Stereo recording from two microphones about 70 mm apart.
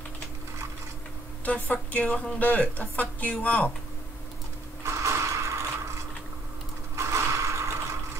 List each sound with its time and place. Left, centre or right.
1.4 s speech: centre
4.8 s mechanisms: right
7.0 s mechanisms: right